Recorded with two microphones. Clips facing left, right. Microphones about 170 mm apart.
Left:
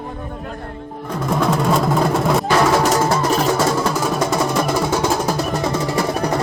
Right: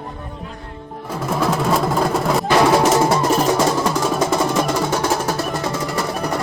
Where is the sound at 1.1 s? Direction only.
5° right (ahead or behind).